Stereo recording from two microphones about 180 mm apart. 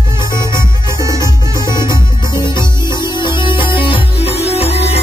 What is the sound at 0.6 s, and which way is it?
Music, 15° right (ahead or behind).